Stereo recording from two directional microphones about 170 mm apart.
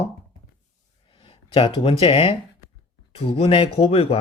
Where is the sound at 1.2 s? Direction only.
35° left (ahead or behind).